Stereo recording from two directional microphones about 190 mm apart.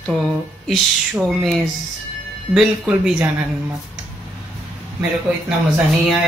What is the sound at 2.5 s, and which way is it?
Speech, 5° right (ahead or behind).